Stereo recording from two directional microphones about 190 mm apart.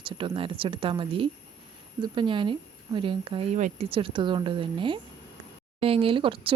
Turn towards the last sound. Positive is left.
turn(degrees=-25)  # may be behind; listen again after turning